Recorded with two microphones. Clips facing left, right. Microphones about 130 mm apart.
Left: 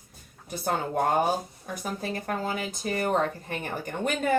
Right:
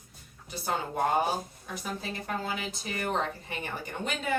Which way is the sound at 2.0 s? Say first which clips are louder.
Left 6 dB; 45° left (ahead or behind).